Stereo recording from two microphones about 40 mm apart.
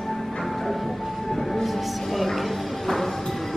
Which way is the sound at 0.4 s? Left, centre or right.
Centre.